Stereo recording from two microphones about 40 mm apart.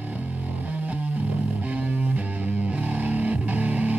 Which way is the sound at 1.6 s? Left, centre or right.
Right.